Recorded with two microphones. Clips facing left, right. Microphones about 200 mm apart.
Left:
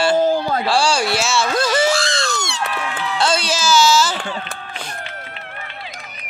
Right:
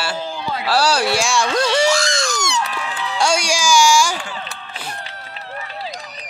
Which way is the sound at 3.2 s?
10° right (ahead or behind).